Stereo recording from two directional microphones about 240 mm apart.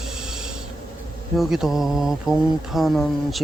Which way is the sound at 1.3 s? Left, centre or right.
Centre.